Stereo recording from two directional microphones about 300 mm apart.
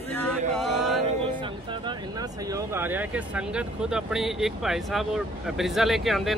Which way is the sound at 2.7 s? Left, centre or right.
Centre.